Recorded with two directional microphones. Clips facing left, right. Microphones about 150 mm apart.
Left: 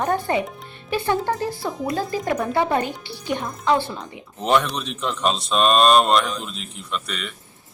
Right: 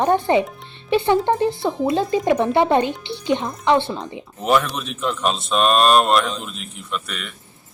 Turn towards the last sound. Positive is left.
turn(degrees=-5)  # may be behind; listen again after turning